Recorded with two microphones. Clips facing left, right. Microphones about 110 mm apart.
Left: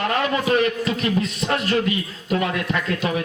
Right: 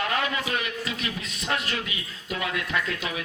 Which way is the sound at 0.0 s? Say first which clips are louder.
Left 6 dB; 40° left (ahead or behind).